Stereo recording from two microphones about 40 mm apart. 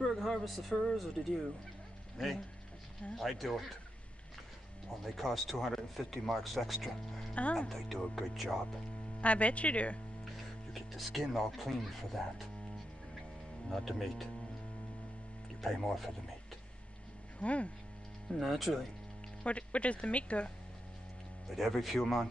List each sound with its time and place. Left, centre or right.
0.1 s speech: centre
5.0 s speech: centre
7.9 s speech: centre
9.2 s speech: left
10.2 s speech: centre
13.7 s speech: centre
15.6 s speech: centre
17.4 s speech: left
18.4 s speech: centre
19.4 s speech: left
21.5 s speech: centre